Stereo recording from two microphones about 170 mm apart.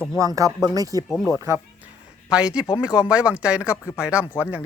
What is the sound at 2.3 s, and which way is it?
Speech, 5° right (ahead or behind).